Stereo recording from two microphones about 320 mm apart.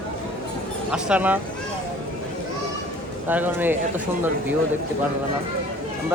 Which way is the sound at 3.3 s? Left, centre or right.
Centre.